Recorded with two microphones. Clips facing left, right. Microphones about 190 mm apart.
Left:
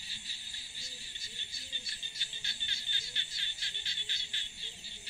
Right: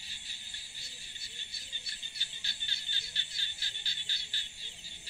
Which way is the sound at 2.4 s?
35° right (ahead or behind).